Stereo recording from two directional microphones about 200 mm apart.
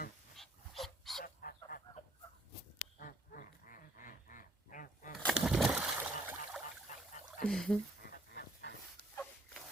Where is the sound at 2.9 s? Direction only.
45° left (ahead or behind).